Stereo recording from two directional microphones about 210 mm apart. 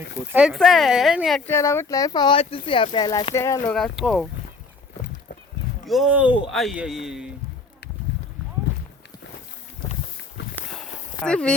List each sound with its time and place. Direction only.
0.3 s speech: 5° right (ahead or behind)
1.5 s speech: 10° left (ahead or behind)
3.7 s speech: centre (ahead or behind)
5.8 s speech: centre (ahead or behind)
10.5 s walk: 5° left (ahead or behind)